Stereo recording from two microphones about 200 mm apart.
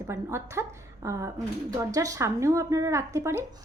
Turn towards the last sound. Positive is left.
turn(degrees=-15)  # may be behind; listen again after turning